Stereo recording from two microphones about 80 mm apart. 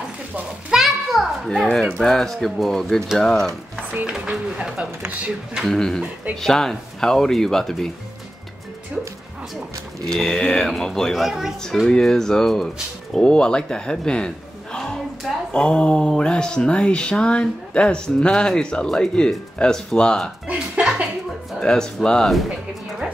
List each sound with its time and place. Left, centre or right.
0.7 s children playing: centre
2.0 s speech: centre
3.9 s speech: centre
5.7 s speech: centre
10.0 s speech: centre
20.5 s speech: centre
21.5 s speech: centre